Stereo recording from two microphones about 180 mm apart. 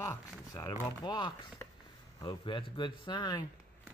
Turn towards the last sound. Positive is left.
turn(degrees=25)  # may be behind; listen again after turning